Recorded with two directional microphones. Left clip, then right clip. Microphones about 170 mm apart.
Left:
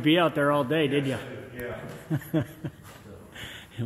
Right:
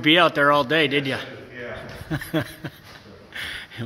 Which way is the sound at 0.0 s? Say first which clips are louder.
Right 6 dB; 10° right (ahead or behind).